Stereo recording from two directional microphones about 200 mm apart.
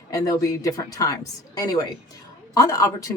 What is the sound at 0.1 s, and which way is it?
Speech, 15° left (ahead or behind).